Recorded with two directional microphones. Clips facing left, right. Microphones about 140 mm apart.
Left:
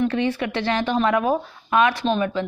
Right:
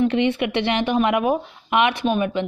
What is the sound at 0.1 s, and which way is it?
A woman's voice, 20° right (ahead or behind).